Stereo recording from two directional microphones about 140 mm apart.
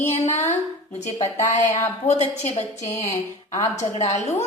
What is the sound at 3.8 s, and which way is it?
Speech, 55° left (ahead or behind).